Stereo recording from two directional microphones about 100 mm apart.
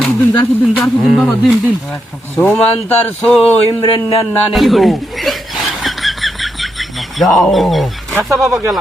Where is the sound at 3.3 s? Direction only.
5° left (ahead or behind).